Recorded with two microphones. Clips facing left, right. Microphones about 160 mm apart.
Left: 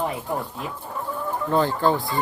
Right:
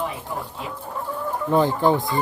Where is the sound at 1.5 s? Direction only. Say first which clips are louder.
Right 2 dB; 15° right (ahead or behind).